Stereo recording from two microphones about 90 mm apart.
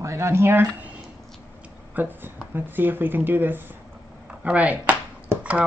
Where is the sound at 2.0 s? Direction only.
20° right (ahead or behind).